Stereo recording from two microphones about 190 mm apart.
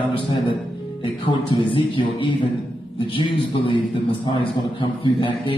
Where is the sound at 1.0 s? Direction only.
25° left (ahead or behind).